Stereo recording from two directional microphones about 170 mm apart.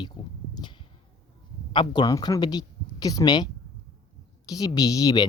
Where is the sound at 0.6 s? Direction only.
25° left (ahead or behind).